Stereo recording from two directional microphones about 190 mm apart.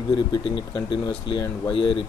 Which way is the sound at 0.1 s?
25° left (ahead or behind).